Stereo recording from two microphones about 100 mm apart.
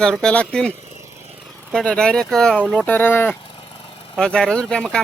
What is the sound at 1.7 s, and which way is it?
Speech, 10° left (ahead or behind).